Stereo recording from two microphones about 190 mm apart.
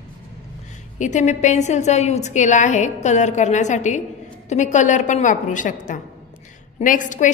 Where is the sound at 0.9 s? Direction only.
40° left (ahead or behind).